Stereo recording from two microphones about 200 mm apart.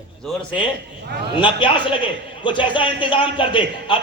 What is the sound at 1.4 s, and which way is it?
A man's voice, 25° left (ahead or behind).